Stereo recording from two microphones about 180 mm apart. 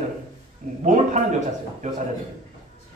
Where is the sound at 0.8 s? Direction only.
45° right (ahead or behind).